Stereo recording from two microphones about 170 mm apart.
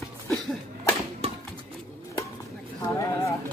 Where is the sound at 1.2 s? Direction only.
35° right (ahead or behind).